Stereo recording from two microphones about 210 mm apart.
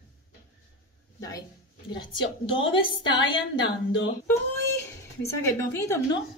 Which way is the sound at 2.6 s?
65° left (ahead or behind).